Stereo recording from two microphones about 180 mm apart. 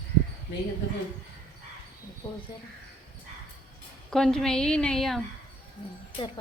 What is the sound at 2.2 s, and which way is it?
Speech, 25° left (ahead or behind).